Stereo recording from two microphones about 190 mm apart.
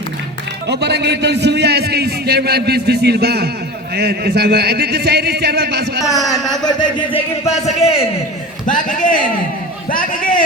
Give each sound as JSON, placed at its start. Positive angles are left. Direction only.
{"t": 0.7, "sound": "a man's voice", "side_deg": -60}
{"t": 6.7, "sound": "a man's voice", "side_deg": 20}